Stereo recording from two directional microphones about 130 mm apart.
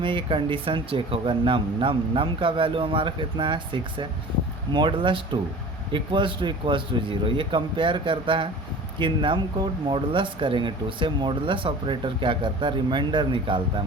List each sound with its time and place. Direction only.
0.0 s speech: 40° right (ahead or behind)